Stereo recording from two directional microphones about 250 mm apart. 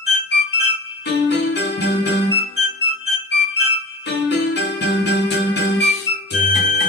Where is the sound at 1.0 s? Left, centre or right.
Left.